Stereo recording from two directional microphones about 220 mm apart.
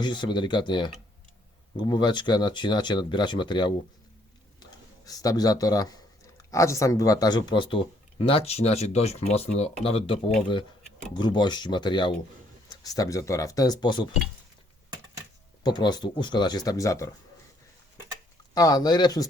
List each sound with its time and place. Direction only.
0.0 s speech: 20° left (ahead or behind)
5.0 s speech: 15° left (ahead or behind)
15.6 s speech: 20° left (ahead or behind)
18.5 s speech: 15° left (ahead or behind)